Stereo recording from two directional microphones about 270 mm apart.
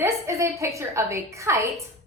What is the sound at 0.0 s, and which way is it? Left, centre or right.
A woman's voice, centre.